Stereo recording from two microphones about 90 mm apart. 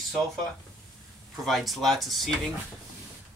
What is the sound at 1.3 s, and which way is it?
Speech, centre (ahead or behind).